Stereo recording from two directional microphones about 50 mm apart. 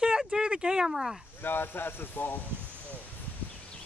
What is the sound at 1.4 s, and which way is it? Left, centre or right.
Speech, left.